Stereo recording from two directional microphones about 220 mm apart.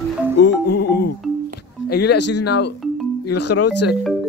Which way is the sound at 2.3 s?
90° left.